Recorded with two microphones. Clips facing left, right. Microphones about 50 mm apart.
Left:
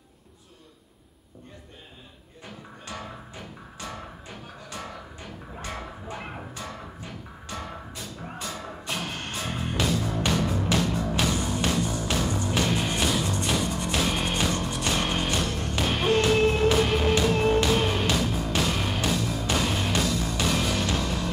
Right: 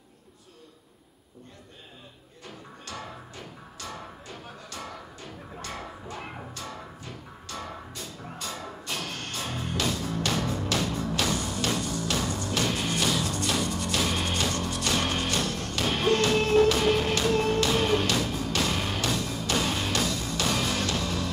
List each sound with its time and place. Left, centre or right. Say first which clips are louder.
2.4 s music: left 2 dB; centre
4.6 s music: left 2 dB; centre
19.4 s music: right 1 dB; centre
20.4 s music: left 1 dB; centre
20.8 s music: left 1 dB; centre